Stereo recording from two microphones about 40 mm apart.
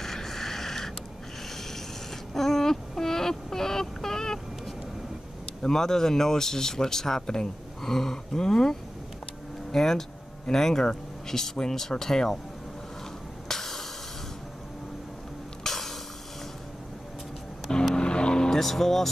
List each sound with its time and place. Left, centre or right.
0.0 s a sound: centre
2.3 s child singing: centre
5.6 s speech: centre
13.5 s hiss: centre
15.6 s a sound: centre
17.9 s vehicle: left
18.6 s speech: centre